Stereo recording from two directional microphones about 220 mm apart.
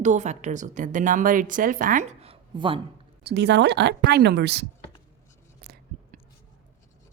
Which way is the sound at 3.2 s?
50° right (ahead or behind).